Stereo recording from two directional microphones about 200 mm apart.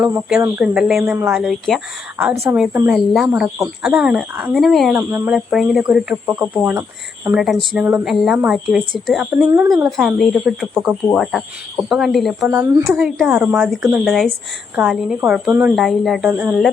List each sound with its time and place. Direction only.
0.3 s a woman's voice: 10° right (ahead or behind)
9.5 s speech: 15° right (ahead or behind)
10.0 s a woman's voice: centre (ahead or behind)